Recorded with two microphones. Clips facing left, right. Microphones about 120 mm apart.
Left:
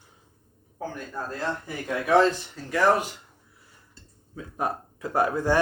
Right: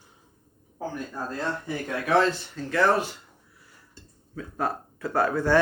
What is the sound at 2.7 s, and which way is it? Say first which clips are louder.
Speech: left 1 dB; 15° left (ahead or behind).